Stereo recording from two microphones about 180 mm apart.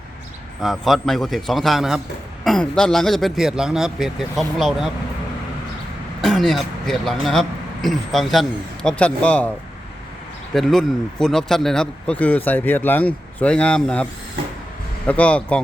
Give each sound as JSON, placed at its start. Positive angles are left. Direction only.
{"t": 0.6, "sound": "speech", "side_deg": 0}
{"t": 6.2, "sound": "speech", "side_deg": 0}
{"t": 10.5, "sound": "speech", "side_deg": 0}